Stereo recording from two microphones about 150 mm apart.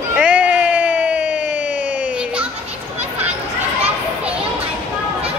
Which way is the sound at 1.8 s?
55° left (ahead or behind).